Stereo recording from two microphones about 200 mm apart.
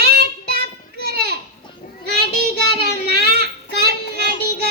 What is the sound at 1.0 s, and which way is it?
Children playing, 50° right (ahead or behind).